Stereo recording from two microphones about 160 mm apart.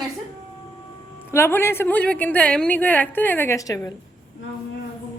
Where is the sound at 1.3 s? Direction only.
15° left (ahead or behind).